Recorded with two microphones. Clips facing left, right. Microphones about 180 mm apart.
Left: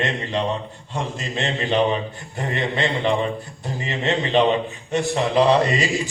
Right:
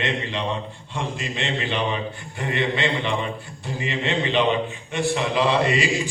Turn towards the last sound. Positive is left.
turn(degrees=40)  # may be behind; listen again after turning